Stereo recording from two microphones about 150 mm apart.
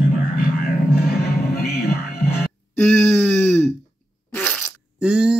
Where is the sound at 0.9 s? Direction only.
90° left.